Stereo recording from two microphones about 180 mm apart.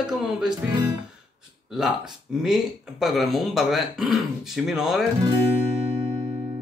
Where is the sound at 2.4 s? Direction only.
Centre (ahead or behind).